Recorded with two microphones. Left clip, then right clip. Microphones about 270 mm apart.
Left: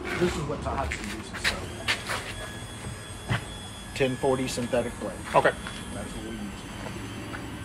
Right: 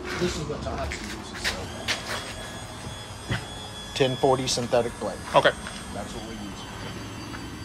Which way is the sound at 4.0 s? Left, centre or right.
Right.